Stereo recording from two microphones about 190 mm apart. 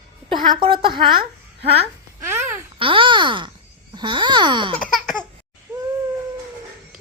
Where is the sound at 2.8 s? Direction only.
25° right (ahead or behind).